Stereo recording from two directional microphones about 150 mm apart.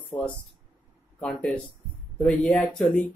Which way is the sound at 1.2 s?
5° left (ahead or behind).